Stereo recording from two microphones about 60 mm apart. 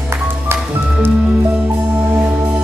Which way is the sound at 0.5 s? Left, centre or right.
Right.